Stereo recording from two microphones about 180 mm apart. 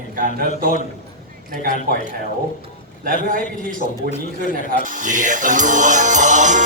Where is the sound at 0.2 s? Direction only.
50° right (ahead or behind).